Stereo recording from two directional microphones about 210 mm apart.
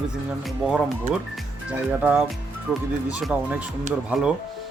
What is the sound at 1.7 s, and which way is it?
Speech, 5° right (ahead or behind).